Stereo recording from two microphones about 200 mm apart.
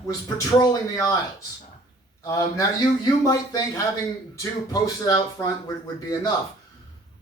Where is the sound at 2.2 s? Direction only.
15° left (ahead or behind).